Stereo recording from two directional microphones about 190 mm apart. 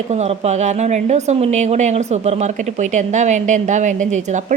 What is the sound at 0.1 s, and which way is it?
Speech, 35° right (ahead or behind).